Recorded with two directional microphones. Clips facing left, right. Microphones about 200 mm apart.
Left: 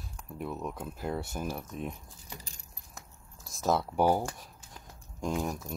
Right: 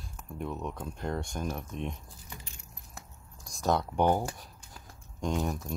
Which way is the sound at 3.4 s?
Centre (ahead or behind).